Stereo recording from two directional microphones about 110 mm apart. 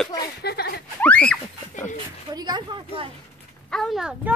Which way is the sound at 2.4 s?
40° right (ahead or behind).